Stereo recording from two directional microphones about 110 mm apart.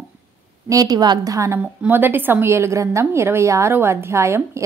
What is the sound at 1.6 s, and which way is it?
A woman's voice, 15° right (ahead or behind).